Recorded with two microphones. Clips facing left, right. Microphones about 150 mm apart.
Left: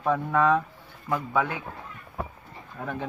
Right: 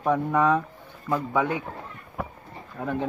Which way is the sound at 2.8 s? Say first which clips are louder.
Right 4 dB; 20° right (ahead or behind).